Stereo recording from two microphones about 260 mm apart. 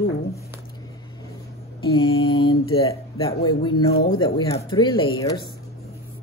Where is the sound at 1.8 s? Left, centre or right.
Centre.